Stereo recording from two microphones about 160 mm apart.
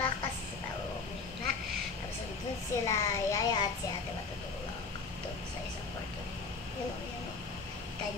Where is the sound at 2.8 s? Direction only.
25° left (ahead or behind).